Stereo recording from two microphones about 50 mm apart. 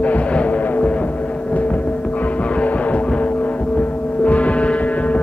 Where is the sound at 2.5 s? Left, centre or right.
Left.